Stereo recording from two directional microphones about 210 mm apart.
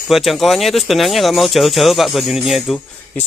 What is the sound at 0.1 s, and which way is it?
Speech, centre (ahead or behind).